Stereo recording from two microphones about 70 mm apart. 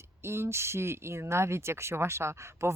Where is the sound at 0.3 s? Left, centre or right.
Right.